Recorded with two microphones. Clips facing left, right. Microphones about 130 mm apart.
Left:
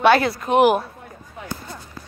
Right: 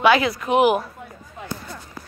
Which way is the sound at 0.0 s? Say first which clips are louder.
Left 1 dB; 40° left (ahead or behind).